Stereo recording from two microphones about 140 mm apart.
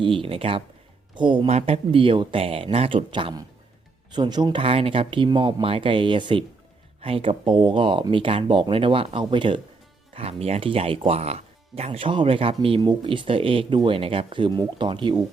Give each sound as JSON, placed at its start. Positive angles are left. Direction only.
{"t": 0.0, "sound": "speech", "side_deg": -40}
{"t": 1.5, "sound": "speech", "side_deg": -50}
{"t": 4.6, "sound": "speech", "side_deg": -40}